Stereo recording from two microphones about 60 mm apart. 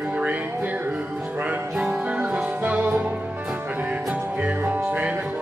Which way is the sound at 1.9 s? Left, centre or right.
Centre.